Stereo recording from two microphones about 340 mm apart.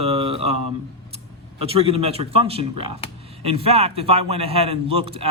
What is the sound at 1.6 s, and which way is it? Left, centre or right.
A man's voice, centre.